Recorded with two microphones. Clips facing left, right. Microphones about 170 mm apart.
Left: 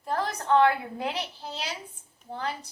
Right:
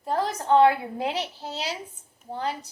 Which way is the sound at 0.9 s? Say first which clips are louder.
Right 3 dB; 40° right (ahead or behind).